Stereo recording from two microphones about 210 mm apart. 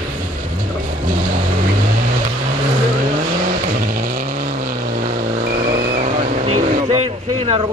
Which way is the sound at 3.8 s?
45° right (ahead or behind).